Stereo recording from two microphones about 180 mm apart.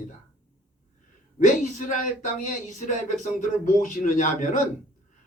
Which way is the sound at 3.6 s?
50° left (ahead or behind).